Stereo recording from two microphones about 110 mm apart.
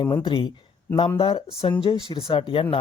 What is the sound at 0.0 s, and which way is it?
Speech, 50° left (ahead or behind).